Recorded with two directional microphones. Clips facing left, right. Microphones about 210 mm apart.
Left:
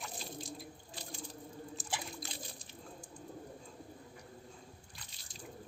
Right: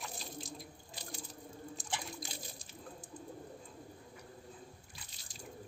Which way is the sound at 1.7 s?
Centre (ahead or behind).